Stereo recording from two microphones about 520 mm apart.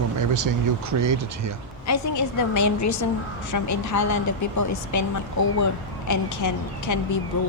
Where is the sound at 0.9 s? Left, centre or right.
Right.